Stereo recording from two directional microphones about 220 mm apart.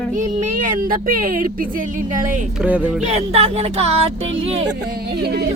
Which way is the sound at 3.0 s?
30° right (ahead or behind).